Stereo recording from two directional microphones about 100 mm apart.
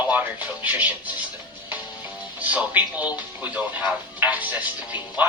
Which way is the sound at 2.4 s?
15° right (ahead or behind).